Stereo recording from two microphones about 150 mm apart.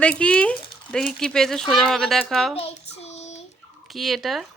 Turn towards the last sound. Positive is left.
turn(degrees=0)  # may be behind; listen again after turning